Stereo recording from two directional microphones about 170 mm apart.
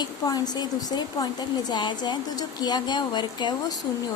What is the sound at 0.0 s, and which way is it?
Speech, 25° left (ahead or behind).